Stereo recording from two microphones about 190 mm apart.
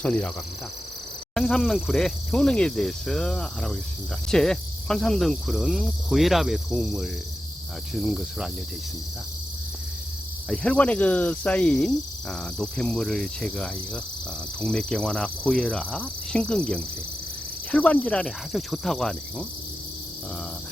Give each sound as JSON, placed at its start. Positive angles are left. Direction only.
{"t": 0.0, "sound": "speech", "side_deg": 5}
{"t": 1.3, "sound": "speech", "side_deg": 5}
{"t": 10.5, "sound": "speech", "side_deg": 5}